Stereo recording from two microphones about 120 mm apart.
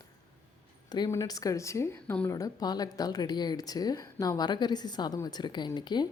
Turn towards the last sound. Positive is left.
turn(degrees=40)  # may be behind; listen again after turning